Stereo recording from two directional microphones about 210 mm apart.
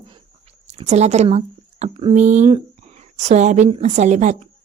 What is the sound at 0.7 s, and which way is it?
Speech, 30° right (ahead or behind).